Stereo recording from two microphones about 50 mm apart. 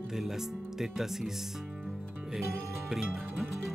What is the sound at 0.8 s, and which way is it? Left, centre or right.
Speech, centre.